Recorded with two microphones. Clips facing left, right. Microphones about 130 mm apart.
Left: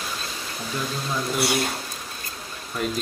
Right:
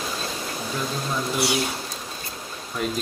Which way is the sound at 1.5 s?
55° left (ahead or behind).